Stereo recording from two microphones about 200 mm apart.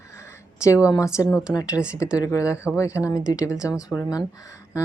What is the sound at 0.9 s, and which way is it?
Speech, 15° left (ahead or behind).